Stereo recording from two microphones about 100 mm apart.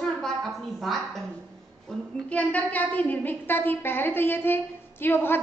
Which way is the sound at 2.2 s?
15° left (ahead or behind).